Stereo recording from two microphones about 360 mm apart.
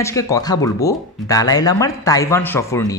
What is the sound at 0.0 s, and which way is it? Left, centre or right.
Speech, centre.